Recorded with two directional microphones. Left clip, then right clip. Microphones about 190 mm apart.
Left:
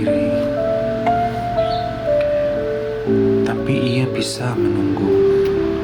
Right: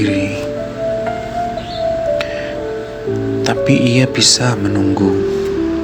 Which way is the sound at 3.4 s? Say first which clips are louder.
Right 6 dB; 30° right (ahead or behind).